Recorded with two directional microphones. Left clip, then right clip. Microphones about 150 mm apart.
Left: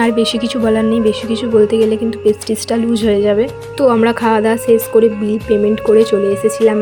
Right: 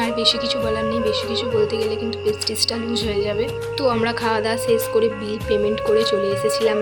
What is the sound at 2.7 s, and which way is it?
Speech, 50° left (ahead or behind).